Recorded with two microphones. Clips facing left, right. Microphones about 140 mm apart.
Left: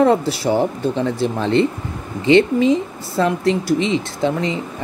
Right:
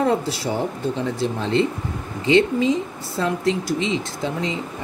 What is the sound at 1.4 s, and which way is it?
Speech, 60° left (ahead or behind).